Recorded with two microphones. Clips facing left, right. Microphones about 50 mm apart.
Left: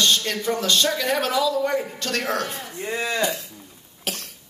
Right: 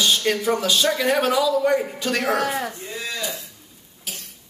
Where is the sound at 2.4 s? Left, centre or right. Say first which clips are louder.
Right 7 dB; right.